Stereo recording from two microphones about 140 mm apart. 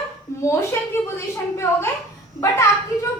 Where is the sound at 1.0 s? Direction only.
20° left (ahead or behind).